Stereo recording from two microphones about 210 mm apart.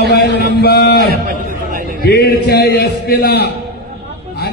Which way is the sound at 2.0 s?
45° left (ahead or behind).